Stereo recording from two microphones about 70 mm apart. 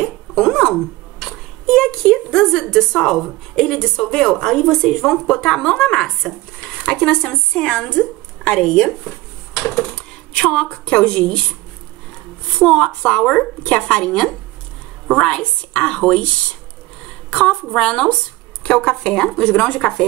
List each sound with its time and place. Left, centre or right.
0.0 s a sound: centre
2.7 s a woman's voice: centre
10.3 s a woman's voice: centre
12.5 s a woman's voice: centre
17.3 s a woman's voice: centre